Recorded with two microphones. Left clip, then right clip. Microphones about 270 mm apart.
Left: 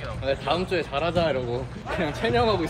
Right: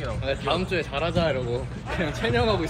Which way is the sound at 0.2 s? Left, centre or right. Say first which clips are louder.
Left 2 dB; left.